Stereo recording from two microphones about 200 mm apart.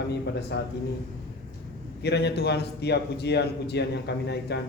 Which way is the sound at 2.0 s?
55° left (ahead or behind).